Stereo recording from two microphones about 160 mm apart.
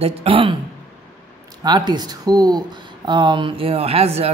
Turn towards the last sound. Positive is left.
turn(degrees=-40)  # may be behind; listen again after turning